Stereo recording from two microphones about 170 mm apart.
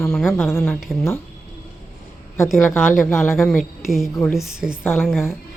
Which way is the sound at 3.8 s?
Centre (ahead or behind).